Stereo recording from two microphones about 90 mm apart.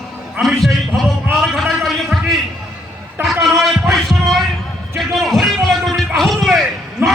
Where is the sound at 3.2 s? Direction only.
5° right (ahead or behind).